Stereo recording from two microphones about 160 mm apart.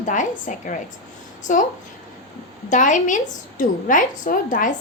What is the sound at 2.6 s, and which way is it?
A woman's voice, 50° left (ahead or behind).